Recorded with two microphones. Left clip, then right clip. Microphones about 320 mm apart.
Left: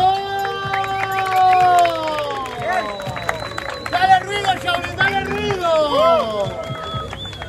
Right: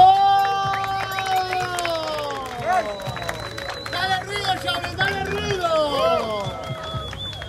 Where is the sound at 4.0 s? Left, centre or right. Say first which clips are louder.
Left 9 dB; centre.